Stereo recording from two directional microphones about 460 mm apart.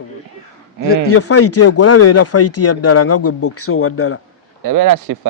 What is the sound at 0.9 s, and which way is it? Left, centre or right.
Speech, left.